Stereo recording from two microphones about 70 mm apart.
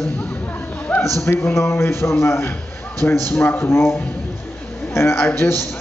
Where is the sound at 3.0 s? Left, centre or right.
Left.